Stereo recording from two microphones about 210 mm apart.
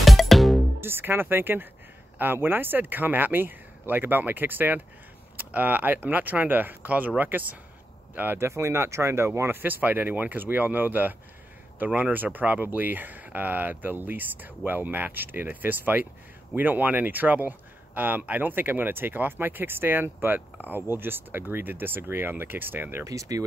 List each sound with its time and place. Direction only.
0.0 s music: centre (ahead or behind)
0.7 s speech: 10° right (ahead or behind)